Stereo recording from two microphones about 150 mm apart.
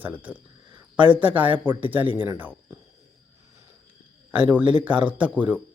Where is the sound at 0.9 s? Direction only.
35° right (ahead or behind).